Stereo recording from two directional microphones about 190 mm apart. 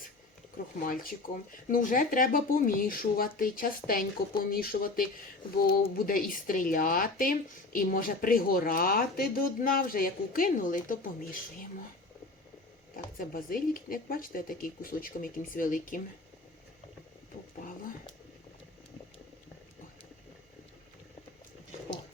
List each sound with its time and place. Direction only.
0.8 s a woman's voice: 50° left (ahead or behind)
6.1 s a woman's voice: 45° left (ahead or behind)
13.1 s a woman's voice: 50° left (ahead or behind)